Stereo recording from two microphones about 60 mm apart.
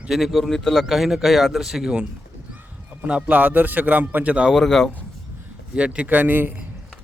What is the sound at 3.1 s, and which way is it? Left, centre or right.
Speech, right.